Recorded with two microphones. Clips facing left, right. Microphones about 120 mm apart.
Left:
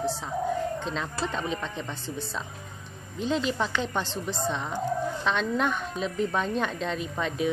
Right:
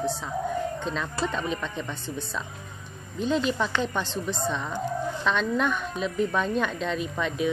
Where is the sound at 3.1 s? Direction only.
25° left (ahead or behind).